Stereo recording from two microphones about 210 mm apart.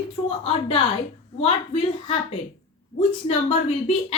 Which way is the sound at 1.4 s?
25° left (ahead or behind).